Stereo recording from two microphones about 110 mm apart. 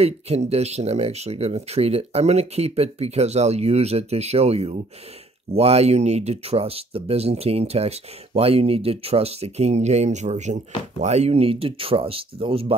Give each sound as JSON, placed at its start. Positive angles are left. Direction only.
{"t": 0.0, "sound": "speech", "side_deg": -70}